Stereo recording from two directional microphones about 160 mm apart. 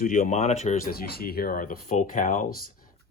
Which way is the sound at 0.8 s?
70° left (ahead or behind).